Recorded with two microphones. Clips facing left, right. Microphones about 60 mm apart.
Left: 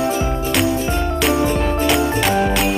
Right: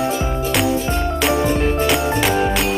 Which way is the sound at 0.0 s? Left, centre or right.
Centre.